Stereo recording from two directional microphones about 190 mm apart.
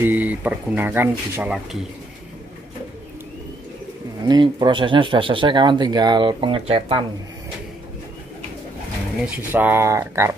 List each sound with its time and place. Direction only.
0.0 s speech: 10° right (ahead or behind)
4.3 s speech: 25° right (ahead or behind)
9.2 s speech: 10° right (ahead or behind)